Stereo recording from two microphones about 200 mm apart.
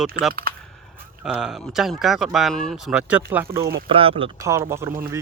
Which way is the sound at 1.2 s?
Centre (ahead or behind).